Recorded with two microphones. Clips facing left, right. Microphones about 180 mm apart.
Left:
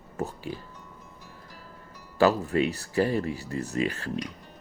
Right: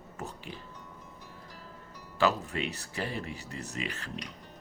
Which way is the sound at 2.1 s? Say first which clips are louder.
Left 6 dB; 40° left (ahead or behind).